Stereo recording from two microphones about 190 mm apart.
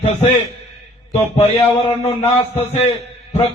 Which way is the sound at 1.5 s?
15° left (ahead or behind).